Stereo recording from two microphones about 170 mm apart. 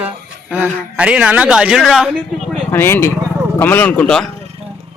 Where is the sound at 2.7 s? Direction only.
15° left (ahead or behind).